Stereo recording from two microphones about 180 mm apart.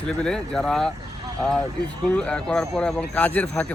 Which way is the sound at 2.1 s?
5° left (ahead or behind).